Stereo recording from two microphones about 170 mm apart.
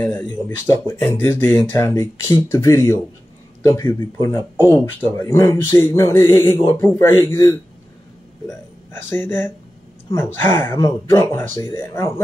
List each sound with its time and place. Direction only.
0.0 s speech: 10° left (ahead or behind)